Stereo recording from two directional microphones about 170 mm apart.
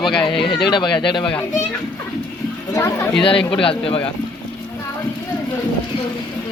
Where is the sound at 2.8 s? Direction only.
15° left (ahead or behind).